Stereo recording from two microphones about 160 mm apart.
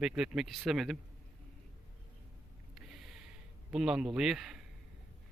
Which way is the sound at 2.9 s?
Centre (ahead or behind).